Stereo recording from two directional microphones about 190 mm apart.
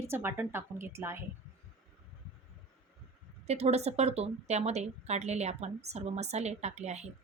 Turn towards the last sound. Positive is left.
turn(degrees=-35)  # may be behind; listen again after turning